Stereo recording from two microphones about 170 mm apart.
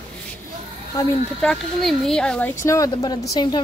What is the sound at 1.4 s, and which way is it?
Speech, 5° left (ahead or behind).